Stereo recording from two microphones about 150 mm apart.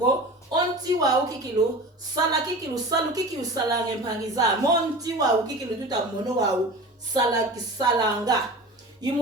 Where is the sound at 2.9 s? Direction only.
25° right (ahead or behind).